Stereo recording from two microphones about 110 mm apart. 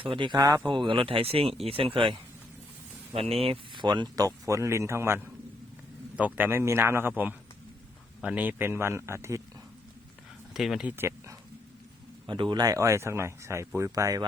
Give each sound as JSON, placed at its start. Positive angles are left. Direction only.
{"t": 0.0, "sound": "speech", "side_deg": -50}
{"t": 3.1, "sound": "speech", "side_deg": -65}
{"t": 3.8, "sound": "speech", "side_deg": -40}
{"t": 10.5, "sound": "speech", "side_deg": 0}
{"t": 10.8, "sound": "speech", "side_deg": -20}
{"t": 12.2, "sound": "speech", "side_deg": -45}